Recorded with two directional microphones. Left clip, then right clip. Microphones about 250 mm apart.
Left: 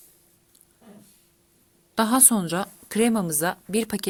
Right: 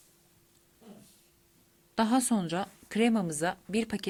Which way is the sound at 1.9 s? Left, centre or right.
Centre.